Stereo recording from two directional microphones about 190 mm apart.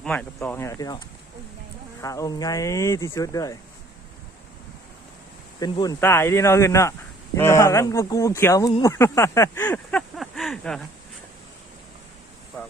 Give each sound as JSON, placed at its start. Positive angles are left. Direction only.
{"t": 0.0, "sound": "speech", "side_deg": 5}
{"t": 5.5, "sound": "speech", "side_deg": 20}